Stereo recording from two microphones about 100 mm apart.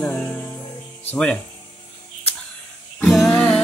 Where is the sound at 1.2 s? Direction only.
10° left (ahead or behind).